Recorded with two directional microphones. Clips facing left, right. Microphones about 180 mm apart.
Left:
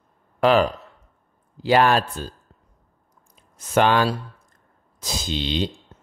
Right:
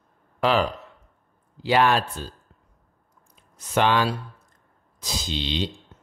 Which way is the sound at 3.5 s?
45° left (ahead or behind).